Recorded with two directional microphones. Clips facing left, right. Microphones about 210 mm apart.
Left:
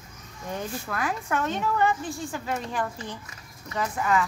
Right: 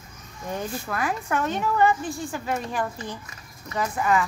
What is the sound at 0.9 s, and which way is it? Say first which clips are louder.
A woman's voice: right 2 dB; 10° right (ahead or behind).